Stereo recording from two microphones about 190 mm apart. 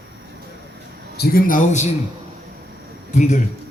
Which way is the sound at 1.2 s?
50° left (ahead or behind).